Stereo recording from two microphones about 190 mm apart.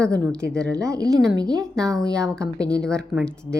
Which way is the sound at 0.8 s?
20° right (ahead or behind).